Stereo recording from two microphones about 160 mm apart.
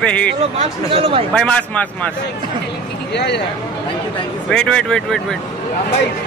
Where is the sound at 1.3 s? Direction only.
5° left (ahead or behind).